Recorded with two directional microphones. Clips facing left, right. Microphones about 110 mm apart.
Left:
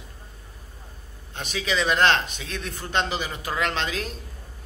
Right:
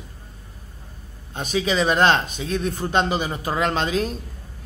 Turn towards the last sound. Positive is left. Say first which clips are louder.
# right 6 dB
turn(degrees=-35)  # may be behind; listen again after turning